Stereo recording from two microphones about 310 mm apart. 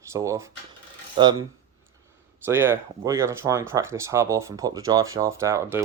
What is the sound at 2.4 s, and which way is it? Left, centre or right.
Speech, centre.